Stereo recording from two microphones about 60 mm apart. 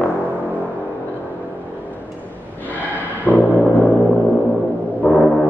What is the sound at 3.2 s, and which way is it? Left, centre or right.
Music, left.